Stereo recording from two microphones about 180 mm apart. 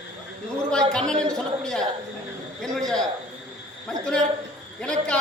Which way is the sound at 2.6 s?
Centre (ahead or behind).